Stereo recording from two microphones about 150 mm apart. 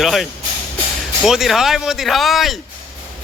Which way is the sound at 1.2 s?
Centre (ahead or behind).